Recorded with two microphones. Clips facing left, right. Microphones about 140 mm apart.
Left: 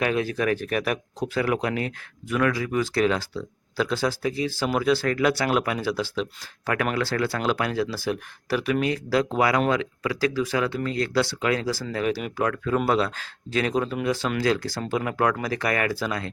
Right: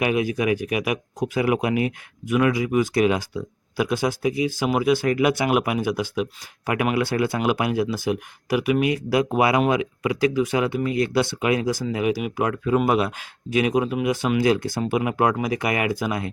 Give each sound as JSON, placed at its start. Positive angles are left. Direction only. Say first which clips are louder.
{"t": 0.0, "sound": "speech", "louder": "right 2 dB", "side_deg": -15}